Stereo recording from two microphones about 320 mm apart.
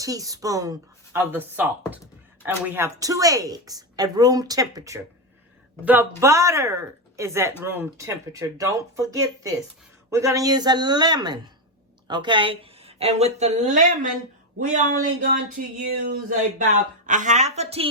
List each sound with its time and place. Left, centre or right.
0.0 s speech: centre
15.2 s a woman's voice: right